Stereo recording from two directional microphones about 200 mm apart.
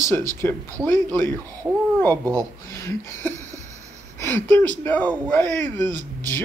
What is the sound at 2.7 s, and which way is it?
Speech, 10° left (ahead or behind).